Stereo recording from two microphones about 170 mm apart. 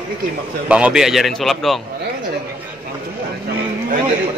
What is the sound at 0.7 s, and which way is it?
A man's voice, 5° right (ahead or behind).